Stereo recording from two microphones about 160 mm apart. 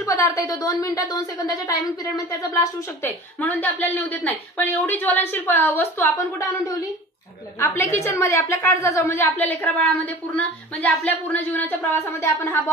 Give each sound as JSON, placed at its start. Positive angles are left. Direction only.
{"t": 0.0, "sound": "a woman's voice", "side_deg": 20}
{"t": 7.6, "sound": "a woman's voice", "side_deg": 20}